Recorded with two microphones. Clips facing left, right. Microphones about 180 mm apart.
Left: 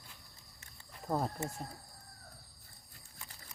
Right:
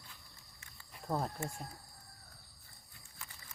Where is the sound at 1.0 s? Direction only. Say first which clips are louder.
Left 2 dB; 5° left (ahead or behind).